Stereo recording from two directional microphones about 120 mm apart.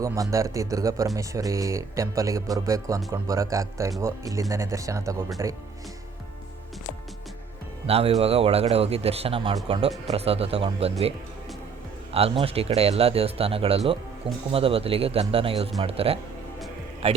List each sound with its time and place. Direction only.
0.0 s speech: 25° right (ahead or behind)
7.9 s speech: 55° right (ahead or behind)
12.1 s speech: 55° right (ahead or behind)